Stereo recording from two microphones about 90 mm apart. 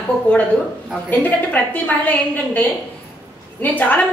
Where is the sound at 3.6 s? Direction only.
20° left (ahead or behind).